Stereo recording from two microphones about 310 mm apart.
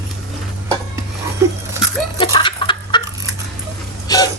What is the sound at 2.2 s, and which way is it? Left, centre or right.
Chicken, centre.